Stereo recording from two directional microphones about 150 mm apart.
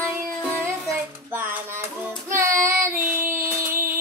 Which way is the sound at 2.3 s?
20° right (ahead or behind).